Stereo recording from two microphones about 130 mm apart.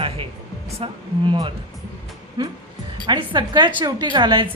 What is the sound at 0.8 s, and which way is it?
A woman's voice, 40° right (ahead or behind).